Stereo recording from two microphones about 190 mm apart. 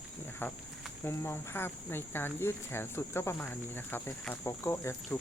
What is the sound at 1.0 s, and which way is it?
Speech, 10° left (ahead or behind).